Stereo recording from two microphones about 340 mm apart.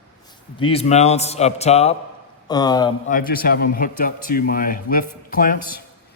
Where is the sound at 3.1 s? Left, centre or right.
Left.